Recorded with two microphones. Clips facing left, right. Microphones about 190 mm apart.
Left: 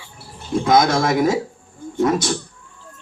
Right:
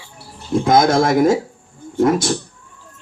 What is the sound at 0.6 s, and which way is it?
Speech, 50° right (ahead or behind).